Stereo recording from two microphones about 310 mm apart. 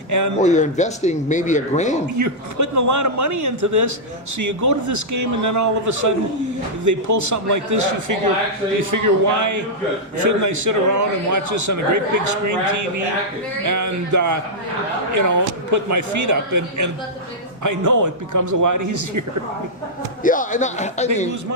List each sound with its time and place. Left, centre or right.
0.1 s speech: right
0.3 s speech: left
2.1 s a man's voice: right
13.7 s a man's voice: right
20.2 s speech: left